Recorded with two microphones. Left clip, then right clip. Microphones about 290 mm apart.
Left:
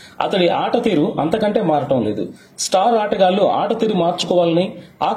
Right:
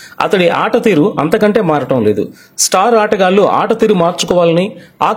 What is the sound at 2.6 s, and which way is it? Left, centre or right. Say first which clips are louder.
Speech: right 5 dB; right.